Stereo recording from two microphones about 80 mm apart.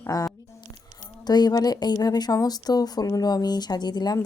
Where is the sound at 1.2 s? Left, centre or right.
Left.